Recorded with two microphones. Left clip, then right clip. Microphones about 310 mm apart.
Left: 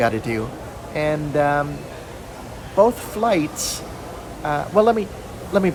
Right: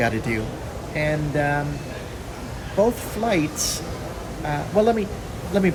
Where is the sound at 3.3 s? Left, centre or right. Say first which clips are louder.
Left 2 dB; centre.